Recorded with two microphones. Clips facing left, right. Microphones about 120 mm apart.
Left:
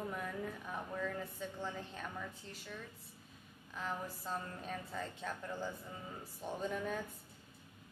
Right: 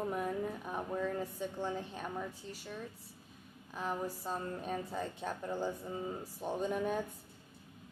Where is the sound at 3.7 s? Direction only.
20° right (ahead or behind).